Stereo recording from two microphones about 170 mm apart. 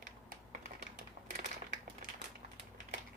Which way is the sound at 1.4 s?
50° right (ahead or behind).